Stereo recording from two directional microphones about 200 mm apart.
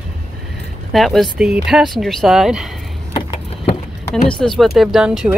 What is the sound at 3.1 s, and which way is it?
Vehicle, 25° left (ahead or behind).